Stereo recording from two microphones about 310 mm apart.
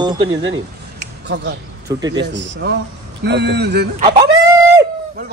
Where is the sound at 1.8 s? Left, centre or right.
Centre.